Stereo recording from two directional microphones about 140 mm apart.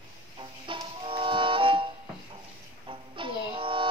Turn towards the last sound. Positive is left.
turn(degrees=-40)  # may be behind; listen again after turning